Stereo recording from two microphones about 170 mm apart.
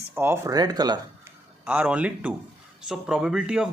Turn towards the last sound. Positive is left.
turn(degrees=-5)  # may be behind; listen again after turning